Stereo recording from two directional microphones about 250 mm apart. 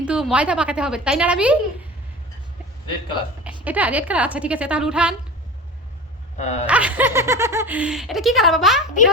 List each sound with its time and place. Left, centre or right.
0.0 s speech: centre
3.4 s speech: centre
6.4 s a sound: left
6.7 s speech: centre